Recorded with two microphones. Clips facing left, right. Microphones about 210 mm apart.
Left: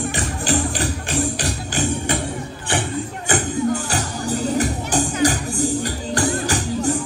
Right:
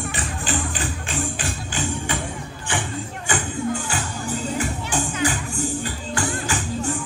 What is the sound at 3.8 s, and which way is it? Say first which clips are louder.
Music: left 4 dB; 40° left (ahead or behind).